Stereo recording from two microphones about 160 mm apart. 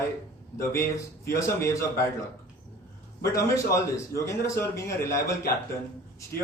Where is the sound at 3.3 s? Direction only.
20° left (ahead or behind).